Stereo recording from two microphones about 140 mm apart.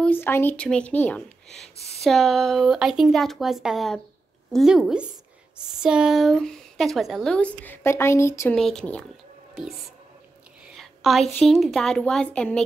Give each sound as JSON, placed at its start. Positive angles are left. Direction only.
{"t": 0.0, "sound": "speech", "side_deg": 15}
{"t": 7.3, "sound": "speech", "side_deg": 10}
{"t": 8.5, "sound": "speech", "side_deg": 5}